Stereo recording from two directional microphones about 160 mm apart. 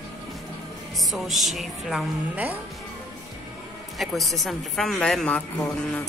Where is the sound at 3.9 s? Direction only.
Centre (ahead or behind).